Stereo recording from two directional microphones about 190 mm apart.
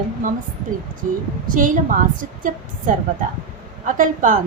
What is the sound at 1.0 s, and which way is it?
Speech, 45° right (ahead or behind).